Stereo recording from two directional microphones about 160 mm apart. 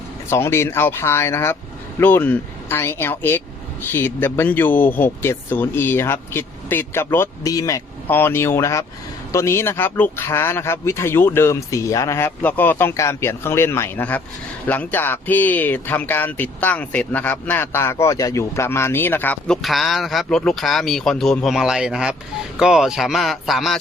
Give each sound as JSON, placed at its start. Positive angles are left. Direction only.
{"t": 0.3, "sound": "speech", "side_deg": 15}